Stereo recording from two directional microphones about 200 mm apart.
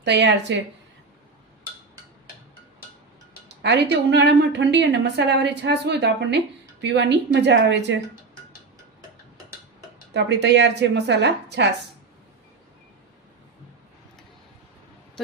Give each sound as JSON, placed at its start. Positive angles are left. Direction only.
{"t": 0.0, "sound": "a woman's voice", "side_deg": -60}
{"t": 3.6, "sound": "a woman's voice", "side_deg": -60}
{"t": 10.2, "sound": "a woman's voice", "side_deg": -60}